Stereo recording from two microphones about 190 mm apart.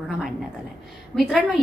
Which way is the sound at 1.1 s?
Centre (ahead or behind).